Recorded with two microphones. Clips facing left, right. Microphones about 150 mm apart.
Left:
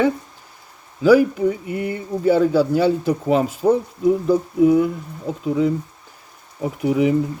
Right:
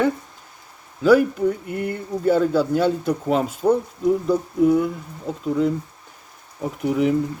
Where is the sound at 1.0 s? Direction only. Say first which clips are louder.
Left 2 dB; 5° left (ahead or behind).